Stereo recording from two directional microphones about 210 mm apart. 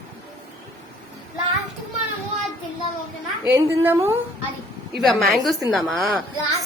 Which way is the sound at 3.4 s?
10° right (ahead or behind).